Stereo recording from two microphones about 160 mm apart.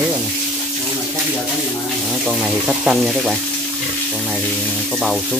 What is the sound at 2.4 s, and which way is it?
Speech, 5° right (ahead or behind).